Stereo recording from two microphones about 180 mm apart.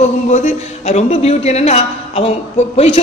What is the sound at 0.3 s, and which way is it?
A man's voice, 40° left (ahead or behind).